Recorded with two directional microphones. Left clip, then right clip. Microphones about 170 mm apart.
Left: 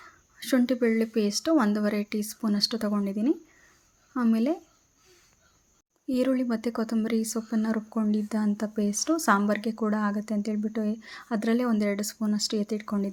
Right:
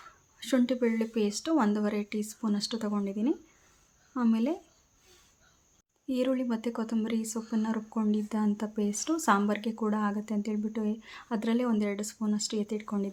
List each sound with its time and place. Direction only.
0.3 s speech: 15° left (ahead or behind)
6.1 s speech: 20° left (ahead or behind)